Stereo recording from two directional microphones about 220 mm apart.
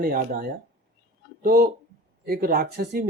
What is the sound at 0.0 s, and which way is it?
Speech, 40° right (ahead or behind).